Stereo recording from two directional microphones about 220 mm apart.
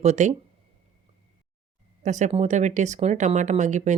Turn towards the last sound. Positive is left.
turn(degrees=-35)  # may be behind; listen again after turning